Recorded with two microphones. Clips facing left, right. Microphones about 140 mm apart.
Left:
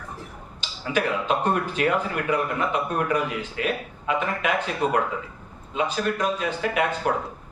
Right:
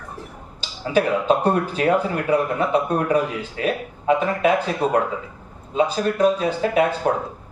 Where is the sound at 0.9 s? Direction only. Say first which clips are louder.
Right 6 dB; 35° right (ahead or behind).